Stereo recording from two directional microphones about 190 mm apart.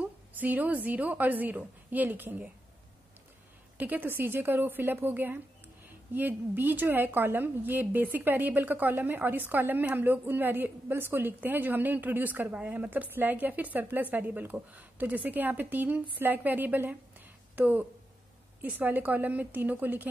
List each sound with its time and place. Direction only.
0.0 s a woman's voice: 10° right (ahead or behind)
3.7 s a woman's voice: 10° right (ahead or behind)